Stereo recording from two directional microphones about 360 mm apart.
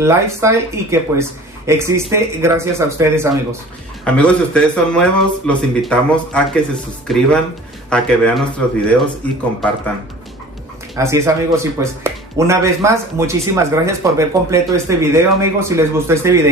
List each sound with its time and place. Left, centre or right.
0.0 s a man's voice: centre
11.0 s speech: centre